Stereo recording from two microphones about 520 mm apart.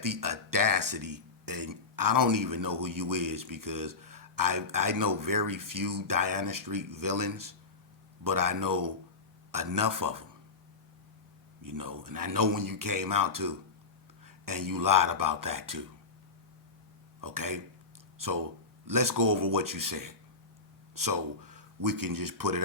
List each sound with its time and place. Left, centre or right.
0.0 s speech: right
11.6 s speech: right
17.2 s speech: right
18.9 s speech: right